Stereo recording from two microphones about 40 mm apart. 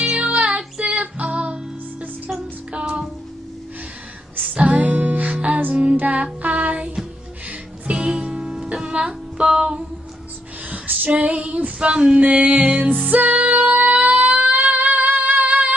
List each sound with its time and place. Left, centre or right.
0.0 s music: right
4.6 s music: right
5.9 s child singing: right
7.4 s music: right
9.5 s a sound: centre
10.7 s female singing: right
12.2 s music: right
12.7 s music: right
13.0 s music: right
14.3 s a sound: right
15.1 s a sound: right
15.4 s a sound: right